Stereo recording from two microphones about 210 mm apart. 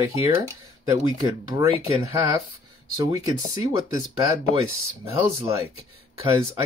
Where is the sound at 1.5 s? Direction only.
15° right (ahead or behind).